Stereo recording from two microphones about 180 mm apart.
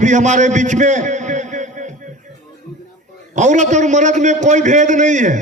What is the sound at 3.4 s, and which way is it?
A man's voice, 40° right (ahead or behind).